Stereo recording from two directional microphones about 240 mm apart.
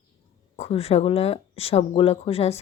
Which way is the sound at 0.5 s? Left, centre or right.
Left.